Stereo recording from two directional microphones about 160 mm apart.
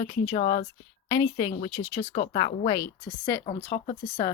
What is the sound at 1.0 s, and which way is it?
Speech, 25° left (ahead or behind).